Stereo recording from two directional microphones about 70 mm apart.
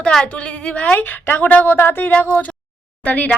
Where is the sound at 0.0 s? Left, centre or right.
Centre; by 2.1 s left.